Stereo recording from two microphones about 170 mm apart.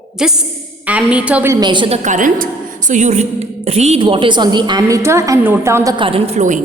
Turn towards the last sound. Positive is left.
turn(degrees=-45)  # may be behind; listen again after turning